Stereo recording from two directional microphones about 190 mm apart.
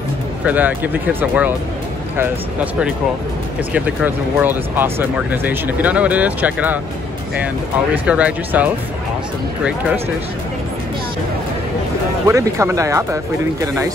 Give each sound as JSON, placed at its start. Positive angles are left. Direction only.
{"t": 0.5, "sound": "speech", "side_deg": -10}
{"t": 7.9, "sound": "speech", "side_deg": -10}
{"t": 12.3, "sound": "speech", "side_deg": -15}